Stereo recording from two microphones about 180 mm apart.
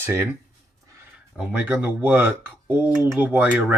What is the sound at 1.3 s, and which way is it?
Speech, 5° right (ahead or behind).